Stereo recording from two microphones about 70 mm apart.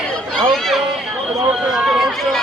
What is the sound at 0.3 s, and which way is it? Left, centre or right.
Chatter, centre.